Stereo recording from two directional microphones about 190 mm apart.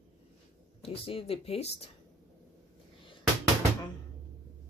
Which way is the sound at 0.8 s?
30° left (ahead or behind).